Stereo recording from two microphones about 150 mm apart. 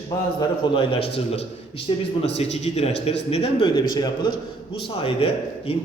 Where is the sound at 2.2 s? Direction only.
45° left (ahead or behind).